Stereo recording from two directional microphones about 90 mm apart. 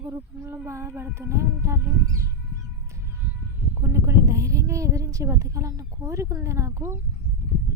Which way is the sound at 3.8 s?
30° right (ahead or behind).